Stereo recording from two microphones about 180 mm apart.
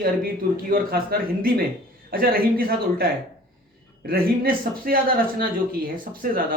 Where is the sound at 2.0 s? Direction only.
55° right (ahead or behind).